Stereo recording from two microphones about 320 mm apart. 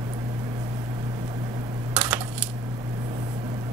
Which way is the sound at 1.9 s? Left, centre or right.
Centre.